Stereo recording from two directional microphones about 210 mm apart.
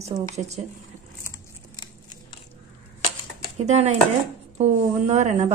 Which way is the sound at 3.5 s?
30° right (ahead or behind).